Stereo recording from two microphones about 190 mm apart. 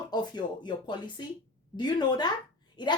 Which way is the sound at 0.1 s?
25° left (ahead or behind).